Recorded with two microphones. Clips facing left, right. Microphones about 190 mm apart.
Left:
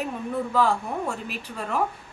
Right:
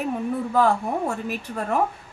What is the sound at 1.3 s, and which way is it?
Speech, 50° right (ahead or behind).